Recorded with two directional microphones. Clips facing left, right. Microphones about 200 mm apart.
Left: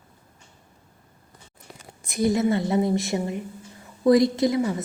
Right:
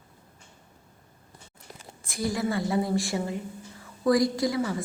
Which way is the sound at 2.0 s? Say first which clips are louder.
Left 7 dB; 20° left (ahead or behind).